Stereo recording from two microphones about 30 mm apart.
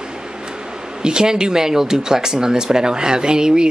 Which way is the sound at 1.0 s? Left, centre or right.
Right.